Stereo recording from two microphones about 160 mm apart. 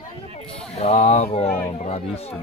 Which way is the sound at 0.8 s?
40° left (ahead or behind).